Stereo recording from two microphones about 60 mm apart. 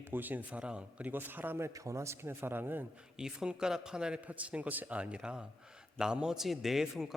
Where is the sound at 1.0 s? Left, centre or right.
Right.